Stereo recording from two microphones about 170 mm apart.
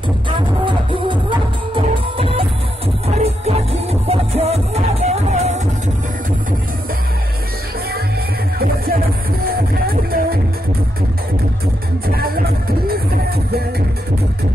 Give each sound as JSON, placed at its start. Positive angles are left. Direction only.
{"t": 0.7, "sound": "music", "side_deg": -30}
{"t": 9.5, "sound": "music", "side_deg": -65}
{"t": 12.1, "sound": "music", "side_deg": -65}